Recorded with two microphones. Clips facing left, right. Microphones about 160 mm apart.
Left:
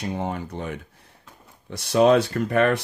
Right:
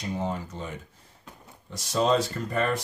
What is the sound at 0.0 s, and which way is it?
Speech, 65° left (ahead or behind).